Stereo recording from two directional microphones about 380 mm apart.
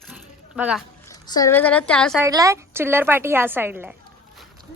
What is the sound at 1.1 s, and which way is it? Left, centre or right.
A woman's voice, centre.